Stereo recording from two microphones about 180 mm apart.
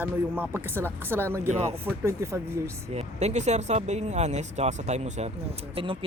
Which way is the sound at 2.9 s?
40° right (ahead or behind).